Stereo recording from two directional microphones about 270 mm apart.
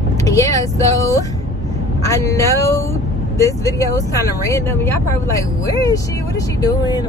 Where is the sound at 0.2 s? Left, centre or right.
Centre.